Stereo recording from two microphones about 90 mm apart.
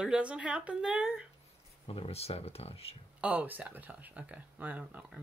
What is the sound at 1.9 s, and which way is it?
Speech, 90° left.